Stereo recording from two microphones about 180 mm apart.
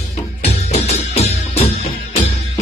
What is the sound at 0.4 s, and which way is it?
Music, 40° left (ahead or behind).